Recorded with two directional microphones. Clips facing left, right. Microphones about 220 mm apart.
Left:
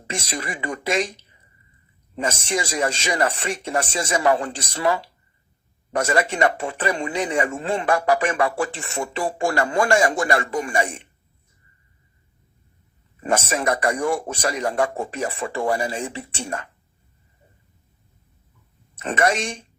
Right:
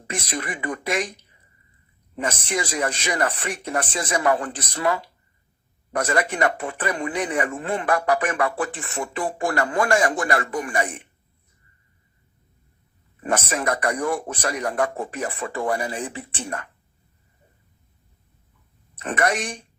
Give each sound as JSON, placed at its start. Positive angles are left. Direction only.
{"t": 0.1, "sound": "speech", "side_deg": 25}
{"t": 2.1, "sound": "speech", "side_deg": 25}
{"t": 13.5, "sound": "speech", "side_deg": 25}
{"t": 19.0, "sound": "speech", "side_deg": 25}